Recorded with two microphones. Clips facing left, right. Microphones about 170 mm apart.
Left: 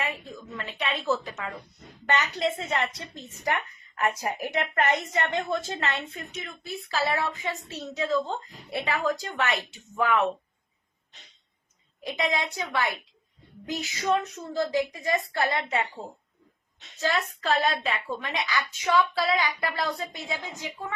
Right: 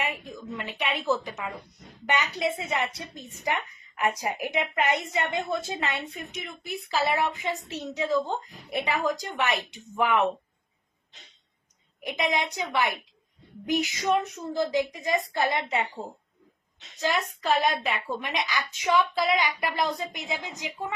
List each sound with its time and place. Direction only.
0.0 s a woman's voice: 15° right (ahead or behind)
11.9 s a woman's voice: 15° right (ahead or behind)
17.0 s a woman's voice: 15° right (ahead or behind)